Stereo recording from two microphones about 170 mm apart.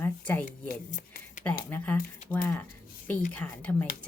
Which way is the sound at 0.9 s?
50° left (ahead or behind).